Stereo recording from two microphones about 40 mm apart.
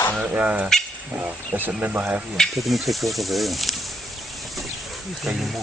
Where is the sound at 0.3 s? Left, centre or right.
Right.